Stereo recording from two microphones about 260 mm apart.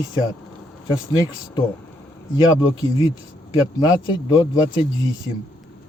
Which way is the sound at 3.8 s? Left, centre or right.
Centre.